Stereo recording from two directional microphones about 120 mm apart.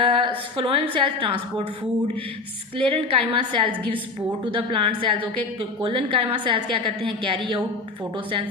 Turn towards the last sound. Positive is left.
turn(degrees=-45)  # may be behind; listen again after turning